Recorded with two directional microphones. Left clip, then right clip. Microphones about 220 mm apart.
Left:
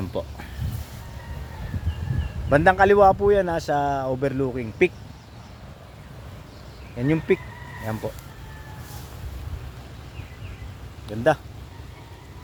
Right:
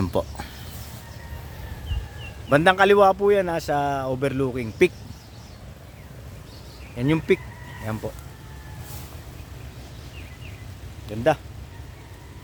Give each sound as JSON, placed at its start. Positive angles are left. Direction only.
{"t": 0.1, "sound": "speech", "side_deg": -40}
{"t": 2.5, "sound": "speech", "side_deg": -5}
{"t": 6.9, "sound": "speech", "side_deg": -5}
{"t": 7.9, "sound": "speech", "side_deg": 10}